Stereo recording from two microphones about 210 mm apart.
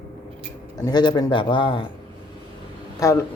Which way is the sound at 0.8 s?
20° left (ahead or behind).